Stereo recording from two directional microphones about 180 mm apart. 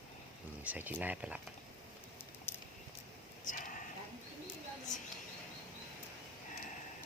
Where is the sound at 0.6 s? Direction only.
10° right (ahead or behind).